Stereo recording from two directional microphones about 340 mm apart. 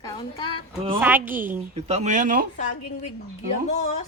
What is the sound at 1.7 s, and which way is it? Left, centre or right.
Speech, centre.